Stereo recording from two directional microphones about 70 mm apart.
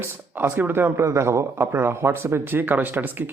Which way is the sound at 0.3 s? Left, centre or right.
Right.